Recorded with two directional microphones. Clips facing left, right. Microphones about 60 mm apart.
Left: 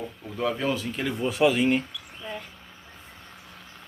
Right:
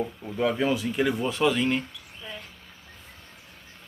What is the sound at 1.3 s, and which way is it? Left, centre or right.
Speech, centre.